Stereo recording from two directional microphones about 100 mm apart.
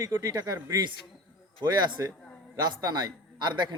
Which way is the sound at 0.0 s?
35° right (ahead or behind).